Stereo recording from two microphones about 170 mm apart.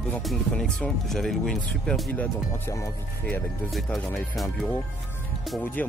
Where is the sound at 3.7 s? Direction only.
Centre (ahead or behind).